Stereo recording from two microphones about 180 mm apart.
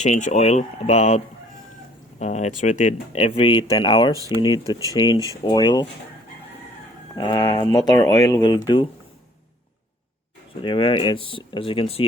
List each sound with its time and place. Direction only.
0.0 s speech: 40° left (ahead or behind); by 5.8 s 25° left (ahead or behind)
7.2 s speech: 25° left (ahead or behind)
10.6 s speech: 30° left (ahead or behind)